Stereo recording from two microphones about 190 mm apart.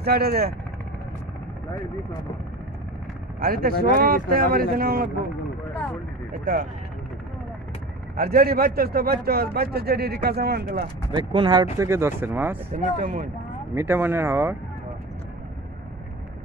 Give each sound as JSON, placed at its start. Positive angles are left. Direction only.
{"t": 0.0, "sound": "speech", "side_deg": -55}
{"t": 3.3, "sound": "a man's voice", "side_deg": -50}
{"t": 5.7, "sound": "vehicle", "side_deg": 10}
{"t": 6.4, "sound": "a man's voice", "side_deg": -45}
{"t": 8.2, "sound": "a man's voice", "side_deg": -50}
{"t": 11.1, "sound": "speech", "side_deg": -25}
{"t": 11.8, "sound": "speech", "side_deg": -15}
{"t": 12.7, "sound": "a man's voice", "side_deg": -45}
{"t": 13.7, "sound": "speech", "side_deg": -10}